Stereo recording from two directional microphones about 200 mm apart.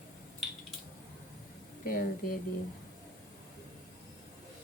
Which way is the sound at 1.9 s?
45° left (ahead or behind).